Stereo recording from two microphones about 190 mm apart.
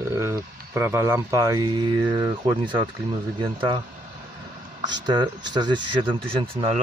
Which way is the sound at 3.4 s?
25° right (ahead or behind).